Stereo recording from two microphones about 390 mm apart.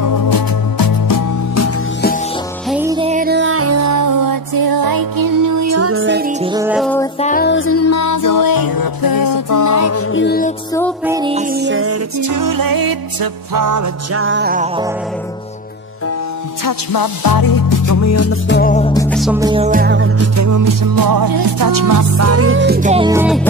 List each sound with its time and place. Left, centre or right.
0.0 s music: left
2.7 s music: centre; by 6.3 s right
6.4 s music: centre
7.2 s music: centre
11.1 s music: centre
11.5 s music: right
12.2 s music: right
14.1 s music: right
16.6 s music: left; by 23.4 s centre